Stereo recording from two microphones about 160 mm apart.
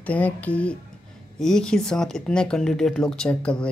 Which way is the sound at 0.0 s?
10° left (ahead or behind).